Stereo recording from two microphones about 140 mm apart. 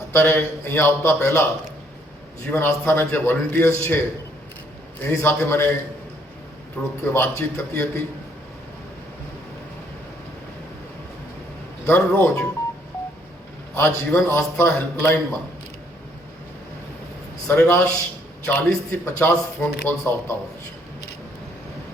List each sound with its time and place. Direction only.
0.1 s speech: 15° left (ahead or behind)
2.5 s speech: 15° left (ahead or behind)
5.0 s speech: 15° left (ahead or behind)
7.0 s speech: 15° left (ahead or behind)
11.9 s speech: 15° left (ahead or behind)
13.7 s speech: 20° left (ahead or behind)
17.5 s speech: 15° left (ahead or behind)